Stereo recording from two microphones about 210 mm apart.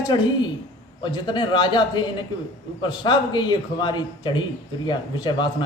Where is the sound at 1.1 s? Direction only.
20° left (ahead or behind).